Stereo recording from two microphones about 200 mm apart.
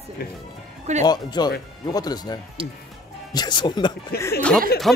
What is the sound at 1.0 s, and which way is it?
Speech, 20° left (ahead or behind).